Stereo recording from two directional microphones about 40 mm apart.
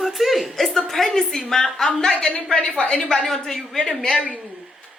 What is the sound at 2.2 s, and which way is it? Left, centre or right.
Speech, left.